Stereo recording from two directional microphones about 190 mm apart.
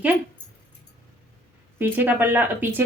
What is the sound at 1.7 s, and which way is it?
Speech, 10° right (ahead or behind).